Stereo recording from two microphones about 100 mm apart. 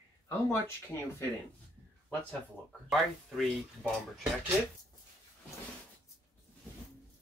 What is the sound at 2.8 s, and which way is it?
Speech, centre (ahead or behind).